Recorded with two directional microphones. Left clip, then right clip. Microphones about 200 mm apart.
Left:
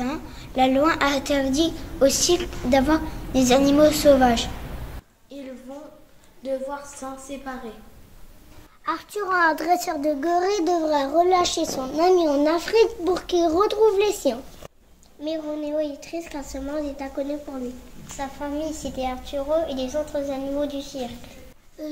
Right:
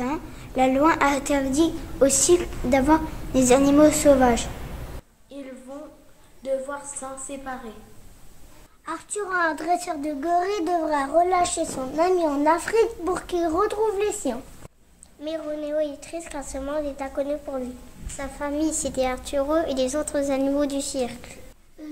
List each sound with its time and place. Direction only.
0.0 s a woman's voice: 15° right (ahead or behind)
7.0 s a woman's voice: 15° right (ahead or behind)
8.8 s a woman's voice: 15° right (ahead or behind)
10.2 s a child's voice: 30° right (ahead or behind)
18.4 s a woman's voice: 45° right (ahead or behind)